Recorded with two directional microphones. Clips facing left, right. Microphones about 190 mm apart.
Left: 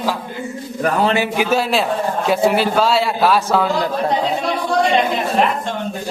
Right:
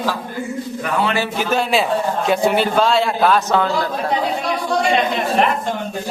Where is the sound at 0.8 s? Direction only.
40° left (ahead or behind).